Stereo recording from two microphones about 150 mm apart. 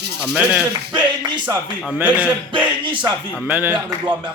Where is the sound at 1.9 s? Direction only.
10° right (ahead or behind).